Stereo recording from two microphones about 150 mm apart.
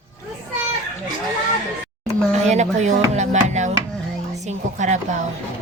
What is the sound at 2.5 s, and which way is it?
Speech, 50° right (ahead or behind).